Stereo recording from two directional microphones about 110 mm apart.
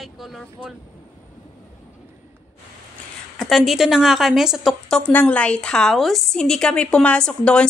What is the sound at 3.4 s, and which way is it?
A woman's voice, centre (ahead or behind).